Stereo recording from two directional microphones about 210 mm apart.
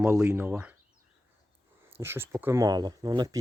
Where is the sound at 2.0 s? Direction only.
10° right (ahead or behind).